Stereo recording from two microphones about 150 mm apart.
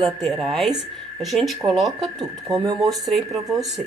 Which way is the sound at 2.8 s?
Centre (ahead or behind).